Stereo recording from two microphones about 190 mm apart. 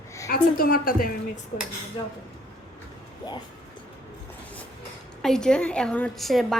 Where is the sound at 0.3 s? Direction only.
50° left (ahead or behind).